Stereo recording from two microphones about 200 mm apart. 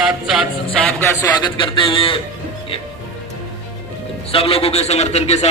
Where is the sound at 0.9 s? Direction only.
10° left (ahead or behind).